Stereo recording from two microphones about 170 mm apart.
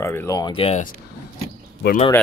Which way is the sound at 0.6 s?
35° left (ahead or behind).